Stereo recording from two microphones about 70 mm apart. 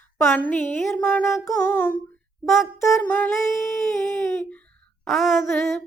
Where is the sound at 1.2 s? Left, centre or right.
Left.